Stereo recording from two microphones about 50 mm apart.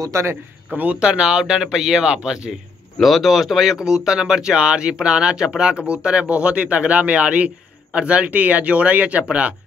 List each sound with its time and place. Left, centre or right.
0.1 s a man's voice: right
0.7 s speech: right
1.0 s speech: centre
3.0 s speech: centre; by 9.6 s right